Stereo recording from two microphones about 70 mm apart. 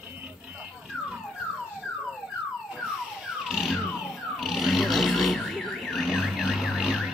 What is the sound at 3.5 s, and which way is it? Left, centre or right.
Car alarm, centre.